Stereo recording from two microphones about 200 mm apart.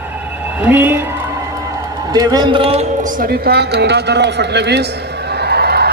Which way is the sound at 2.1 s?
20° right (ahead or behind).